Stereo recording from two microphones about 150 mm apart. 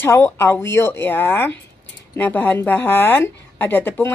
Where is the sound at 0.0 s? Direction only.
15° left (ahead or behind).